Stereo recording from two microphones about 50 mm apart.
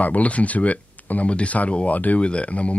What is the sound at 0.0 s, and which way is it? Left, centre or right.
Speech, left.